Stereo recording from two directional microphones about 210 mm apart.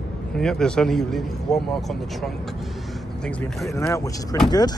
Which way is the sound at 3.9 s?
15° left (ahead or behind).